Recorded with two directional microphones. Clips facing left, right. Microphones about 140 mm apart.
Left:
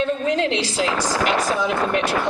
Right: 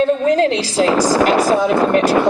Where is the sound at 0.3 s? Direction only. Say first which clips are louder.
Right 6 dB; 40° right (ahead or behind).